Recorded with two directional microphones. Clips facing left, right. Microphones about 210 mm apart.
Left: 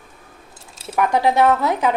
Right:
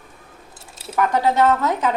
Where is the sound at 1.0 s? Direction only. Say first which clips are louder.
Left 1 dB; 10° left (ahead or behind).